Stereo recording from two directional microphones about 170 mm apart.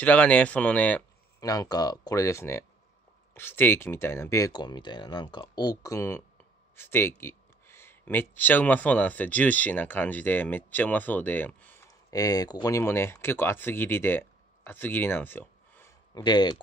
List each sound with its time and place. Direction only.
0.0 s speech: 10° left (ahead or behind)
1.4 s speech: 20° left (ahead or behind)
16.2 s speech: 25° left (ahead or behind)